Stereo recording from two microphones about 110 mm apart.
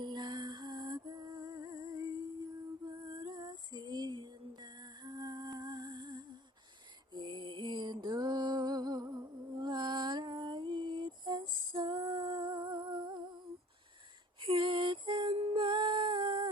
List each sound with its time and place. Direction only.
0.0 s music: 45° right (ahead or behind)
14.4 s music: 50° right (ahead or behind)
15.4 s music: 65° right (ahead or behind)
15.6 s humming: 45° right (ahead or behind)